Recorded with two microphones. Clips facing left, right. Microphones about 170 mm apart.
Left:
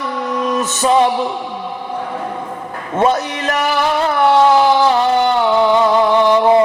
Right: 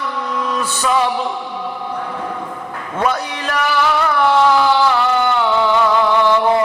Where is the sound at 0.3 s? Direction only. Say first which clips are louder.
Left 4 dB; 20° left (ahead or behind).